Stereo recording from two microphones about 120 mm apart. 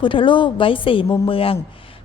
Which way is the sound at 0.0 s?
45° left (ahead or behind).